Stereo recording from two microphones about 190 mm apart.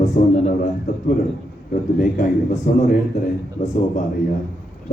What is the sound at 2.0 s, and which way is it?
A man's voice, 40° left (ahead or behind).